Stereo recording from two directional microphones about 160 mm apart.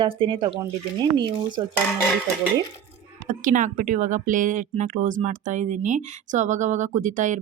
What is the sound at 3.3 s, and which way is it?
A woman's voice, 55° right (ahead or behind).